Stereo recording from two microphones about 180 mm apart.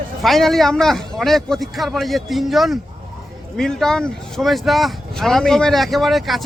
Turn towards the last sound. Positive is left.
turn(degrees=0)  # may be behind; listen again after turning